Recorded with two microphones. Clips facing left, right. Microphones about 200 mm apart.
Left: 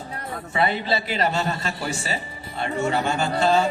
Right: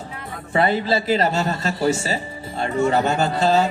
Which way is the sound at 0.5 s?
45° right (ahead or behind).